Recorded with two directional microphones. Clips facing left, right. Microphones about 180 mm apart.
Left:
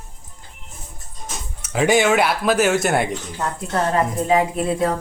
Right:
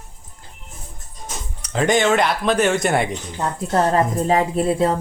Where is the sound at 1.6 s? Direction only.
5° left (ahead or behind).